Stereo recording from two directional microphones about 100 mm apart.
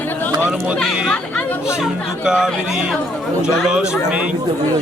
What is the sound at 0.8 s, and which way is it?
Speech, centre (ahead or behind).